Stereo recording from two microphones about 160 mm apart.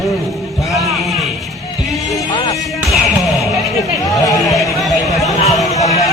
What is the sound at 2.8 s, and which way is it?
Music, centre (ahead or behind).